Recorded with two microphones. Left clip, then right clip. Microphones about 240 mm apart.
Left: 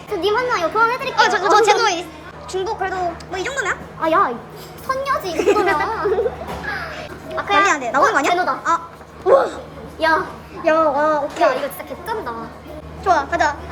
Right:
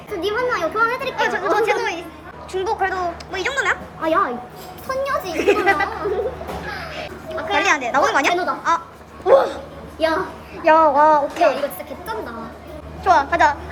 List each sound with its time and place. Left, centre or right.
0.1 s a woman's voice: centre
10.6 s a woman's voice: centre